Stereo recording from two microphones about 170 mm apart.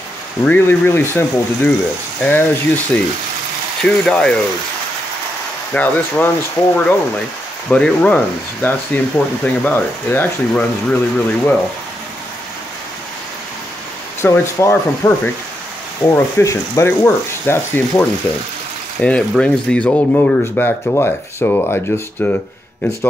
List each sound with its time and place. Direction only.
0.5 s speech: 15° left (ahead or behind)
5.7 s speech: 10° left (ahead or behind)
14.2 s speech: 15° left (ahead or behind)